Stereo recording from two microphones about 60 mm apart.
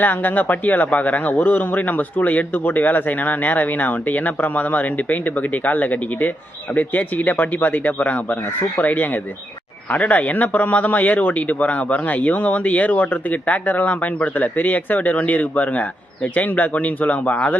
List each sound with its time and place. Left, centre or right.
0.0 s speech: left